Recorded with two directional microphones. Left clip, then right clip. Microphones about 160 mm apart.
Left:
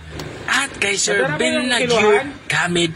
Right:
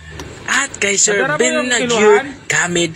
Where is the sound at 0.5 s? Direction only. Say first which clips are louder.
Right 2 dB; 20° right (ahead or behind).